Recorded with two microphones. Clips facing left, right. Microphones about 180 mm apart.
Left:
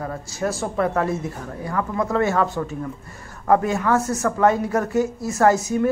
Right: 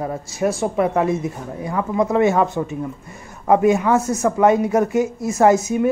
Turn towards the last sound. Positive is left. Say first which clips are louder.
# right 3 dB
turn(degrees=-15)  # may be behind; listen again after turning